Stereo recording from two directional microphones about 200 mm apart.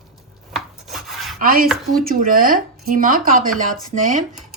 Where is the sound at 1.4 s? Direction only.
45° right (ahead or behind).